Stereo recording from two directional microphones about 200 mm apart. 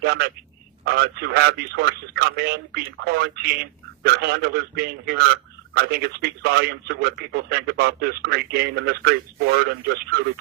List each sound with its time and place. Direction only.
0.0 s a man's voice: 55° right (ahead or behind)